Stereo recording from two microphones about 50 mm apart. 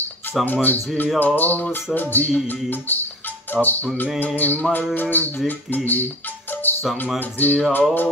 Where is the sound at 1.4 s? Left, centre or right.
Left.